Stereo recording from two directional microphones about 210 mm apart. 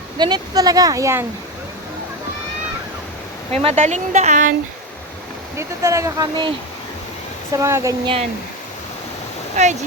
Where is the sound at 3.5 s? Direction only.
30° right (ahead or behind).